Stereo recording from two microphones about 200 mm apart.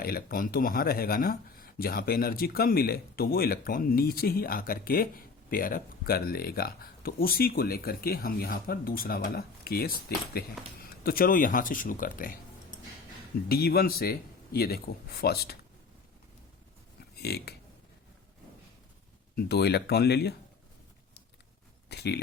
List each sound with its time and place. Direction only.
0.0 s speech: 45° left (ahead or behind)
13.5 s speech: 50° left (ahead or behind)
17.2 s speech: 55° left (ahead or behind)
19.4 s speech: 55° left (ahead or behind)
21.8 s speech: 55° left (ahead or behind)